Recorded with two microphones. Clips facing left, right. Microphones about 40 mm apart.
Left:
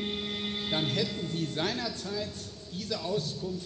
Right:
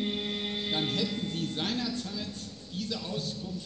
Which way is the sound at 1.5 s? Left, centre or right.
Centre.